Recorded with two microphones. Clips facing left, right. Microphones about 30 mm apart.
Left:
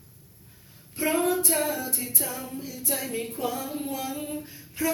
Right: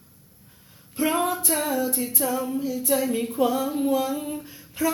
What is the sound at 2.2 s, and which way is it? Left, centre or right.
Music, right.